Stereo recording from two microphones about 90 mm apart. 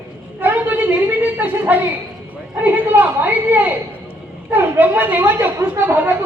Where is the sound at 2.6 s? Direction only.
20° right (ahead or behind).